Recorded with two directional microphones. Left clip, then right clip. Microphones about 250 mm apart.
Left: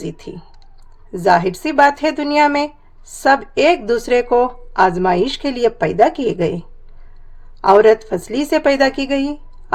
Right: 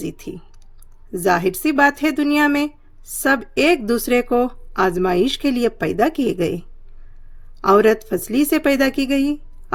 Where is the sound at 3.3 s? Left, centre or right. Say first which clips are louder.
Left 4 dB; right.